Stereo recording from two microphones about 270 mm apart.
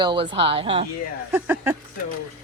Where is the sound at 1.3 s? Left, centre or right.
Centre.